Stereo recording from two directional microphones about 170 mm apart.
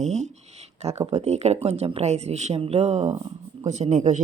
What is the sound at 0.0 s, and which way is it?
Speech, 40° right (ahead or behind).